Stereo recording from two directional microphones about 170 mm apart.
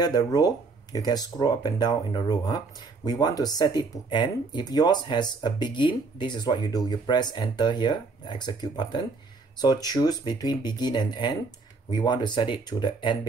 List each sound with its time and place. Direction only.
0.0 s speech: 25° left (ahead or behind)